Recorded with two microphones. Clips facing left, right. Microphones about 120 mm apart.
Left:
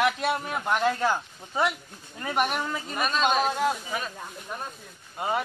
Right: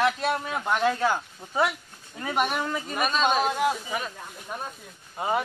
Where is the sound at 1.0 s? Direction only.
10° right (ahead or behind).